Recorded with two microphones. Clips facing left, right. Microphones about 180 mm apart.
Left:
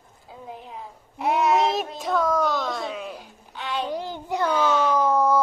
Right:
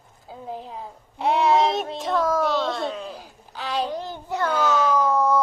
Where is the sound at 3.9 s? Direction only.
15° left (ahead or behind).